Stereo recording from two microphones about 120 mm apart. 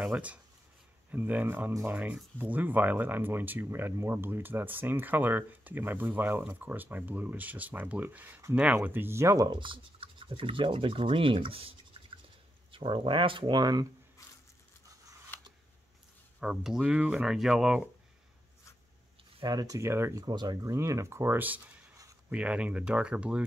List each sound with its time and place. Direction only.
0.0 s speech: 10° right (ahead or behind); by 9.5 s 25° right (ahead or behind)
9.5 s speech: 45° right (ahead or behind)
12.7 s speech: 45° right (ahead or behind)
14.2 s a sound: 25° left (ahead or behind)
16.3 s speech: 5° right (ahead or behind)
19.4 s speech: 30° right (ahead or behind)
20.2 s speech: 35° right (ahead or behind); by 23.4 s 10° right (ahead or behind)